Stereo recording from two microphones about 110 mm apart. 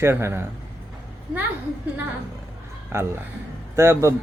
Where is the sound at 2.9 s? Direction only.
25° right (ahead or behind).